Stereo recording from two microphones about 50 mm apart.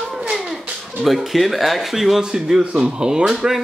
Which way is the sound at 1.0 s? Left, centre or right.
Centre.